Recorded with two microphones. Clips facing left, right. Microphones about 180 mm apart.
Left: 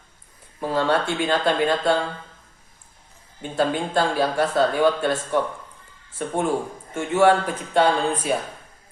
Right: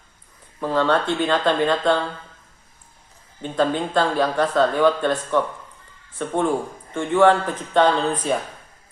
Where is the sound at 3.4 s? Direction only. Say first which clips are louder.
Right 2 dB; 10° left (ahead or behind).